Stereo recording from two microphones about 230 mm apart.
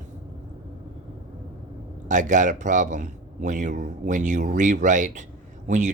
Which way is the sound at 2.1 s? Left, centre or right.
Right.